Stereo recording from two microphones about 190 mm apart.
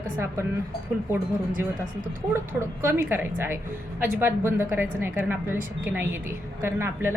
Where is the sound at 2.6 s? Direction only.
15° right (ahead or behind).